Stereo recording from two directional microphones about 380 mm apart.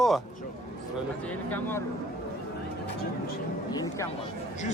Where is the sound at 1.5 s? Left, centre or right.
Centre.